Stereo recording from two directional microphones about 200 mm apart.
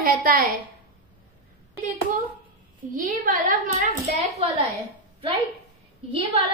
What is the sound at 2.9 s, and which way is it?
Speech, 40° right (ahead or behind).